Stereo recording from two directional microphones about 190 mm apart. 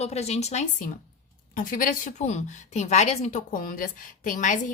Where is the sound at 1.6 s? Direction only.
45° left (ahead or behind).